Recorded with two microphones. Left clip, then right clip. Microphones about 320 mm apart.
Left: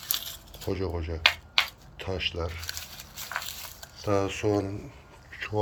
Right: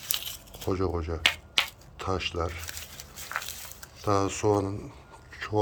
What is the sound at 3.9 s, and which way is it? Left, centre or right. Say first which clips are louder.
Speech: right 1 dB; centre.